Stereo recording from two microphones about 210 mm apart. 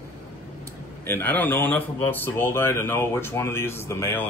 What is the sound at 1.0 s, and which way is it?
Speech, 10° left (ahead or behind).